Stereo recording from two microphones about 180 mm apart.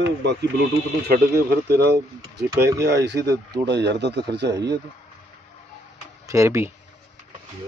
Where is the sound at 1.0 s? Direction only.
60° right (ahead or behind).